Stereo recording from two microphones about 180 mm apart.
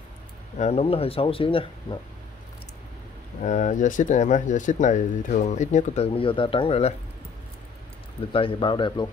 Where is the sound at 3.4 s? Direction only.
40° left (ahead or behind).